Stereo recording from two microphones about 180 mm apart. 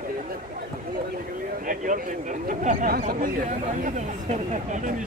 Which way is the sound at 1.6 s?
45° right (ahead or behind).